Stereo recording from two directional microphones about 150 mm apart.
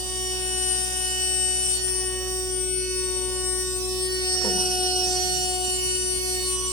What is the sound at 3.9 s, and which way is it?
Music, 30° left (ahead or behind).